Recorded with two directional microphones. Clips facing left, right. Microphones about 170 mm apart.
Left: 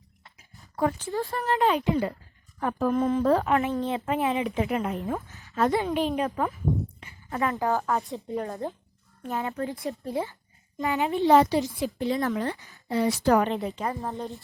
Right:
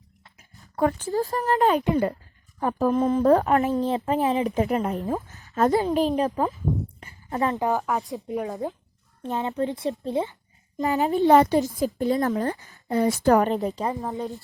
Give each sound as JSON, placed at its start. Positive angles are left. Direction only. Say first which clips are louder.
{"t": 0.8, "sound": "a woman's voice", "louder": "right 4 dB", "side_deg": -50}
{"t": 2.6, "sound": "speech", "louder": "right 3 dB", "side_deg": -35}
{"t": 3.7, "sound": "speech", "louder": "right 4 dB", "side_deg": 0}
{"t": 3.9, "sound": "speech", "louder": "right 3 dB", "side_deg": -35}
{"t": 5.3, "sound": "a sound", "louder": "right 3 dB", "side_deg": -45}
{"t": 5.7, "sound": "speech", "louder": "right 4 dB", "side_deg": -35}
{"t": 7.0, "sound": "a sound", "louder": "right 5 dB", "side_deg": -35}
{"t": 7.5, "sound": "a child's voice", "louder": "even", "side_deg": -20}
{"t": 7.8, "sound": "speech", "louder": "right 1 dB", "side_deg": 0}
{"t": 9.2, "sound": "a child's voice", "louder": "right 4 dB", "side_deg": -20}
{"t": 10.8, "sound": "speech", "louder": "right 4 dB", "side_deg": -40}
{"t": 11.3, "sound": "a woman's voice", "louder": "right 2 dB", "side_deg": -50}
{"t": 14.0, "sound": "speech", "louder": "right 3 dB", "side_deg": 0}